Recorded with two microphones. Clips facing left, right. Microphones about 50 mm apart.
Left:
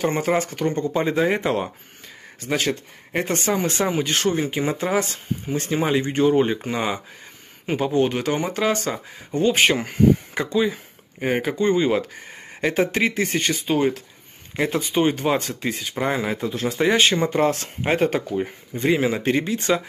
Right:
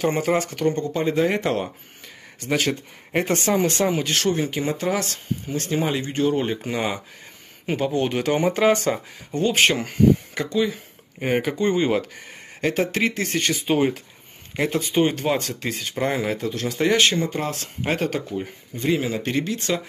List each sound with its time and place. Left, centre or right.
0.0 s speech: centre
10.3 s speech: centre
11.1 s speech: centre
12.5 s speech: centre
13.5 s speech: centre
17.1 s speech: left
17.8 s speech: centre
18.1 s speech: left